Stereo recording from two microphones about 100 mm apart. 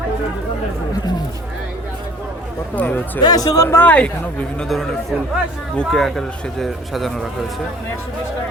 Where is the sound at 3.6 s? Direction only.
25° left (ahead or behind).